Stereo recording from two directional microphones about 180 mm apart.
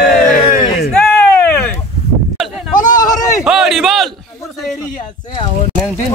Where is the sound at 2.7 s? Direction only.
45° left (ahead or behind).